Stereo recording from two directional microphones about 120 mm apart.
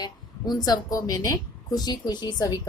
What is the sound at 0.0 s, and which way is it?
Speech, 35° left (ahead or behind).